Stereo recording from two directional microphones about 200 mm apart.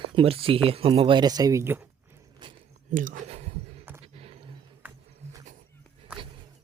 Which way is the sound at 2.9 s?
40° right (ahead or behind).